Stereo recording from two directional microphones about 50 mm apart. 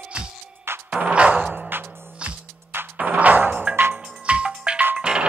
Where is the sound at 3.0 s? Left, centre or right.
Right.